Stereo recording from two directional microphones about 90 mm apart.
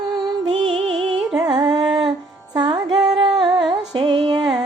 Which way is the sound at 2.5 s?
55° right (ahead or behind).